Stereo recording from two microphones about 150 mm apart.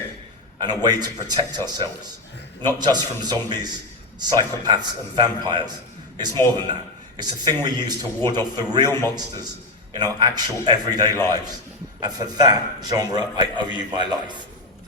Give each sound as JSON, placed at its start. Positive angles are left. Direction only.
{"t": 0.6, "sound": "a man's voice", "side_deg": -25}